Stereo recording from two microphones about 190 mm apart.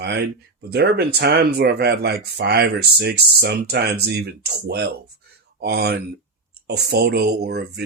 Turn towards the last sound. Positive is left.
turn(degrees=-60)  # may be behind; listen again after turning